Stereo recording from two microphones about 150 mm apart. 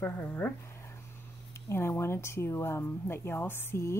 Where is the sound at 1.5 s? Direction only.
15° left (ahead or behind).